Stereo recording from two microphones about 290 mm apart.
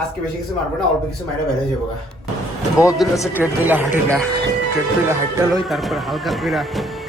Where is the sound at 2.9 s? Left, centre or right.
Centre.